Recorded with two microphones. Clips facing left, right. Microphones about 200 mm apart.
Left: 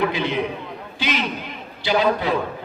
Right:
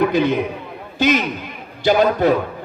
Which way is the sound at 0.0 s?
45° right (ahead or behind).